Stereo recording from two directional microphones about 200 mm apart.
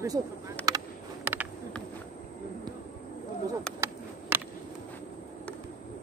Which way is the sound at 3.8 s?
15° right (ahead or behind).